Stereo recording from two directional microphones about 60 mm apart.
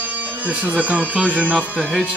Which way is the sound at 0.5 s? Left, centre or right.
Right.